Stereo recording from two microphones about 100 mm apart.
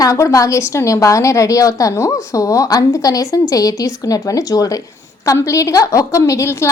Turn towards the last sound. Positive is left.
turn(degrees=30)  # may be behind; listen again after turning